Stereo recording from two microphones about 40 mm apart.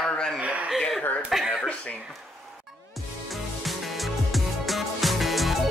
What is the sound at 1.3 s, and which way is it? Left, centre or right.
Speech, centre.